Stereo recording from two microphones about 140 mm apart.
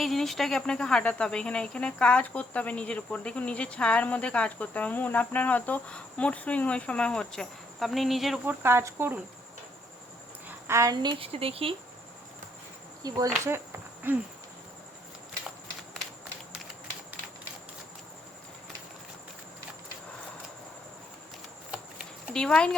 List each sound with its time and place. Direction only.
0.0 s speech: centre (ahead or behind)
8.4 s speech: 15° right (ahead or behind)
10.7 s speech: 25° right (ahead or behind); by 11.7 s 45° right (ahead or behind)
13.0 s insect: 25° right (ahead or behind)
14.0 s speech: 10° right (ahead or behind)
22.3 s speech: 5° left (ahead or behind)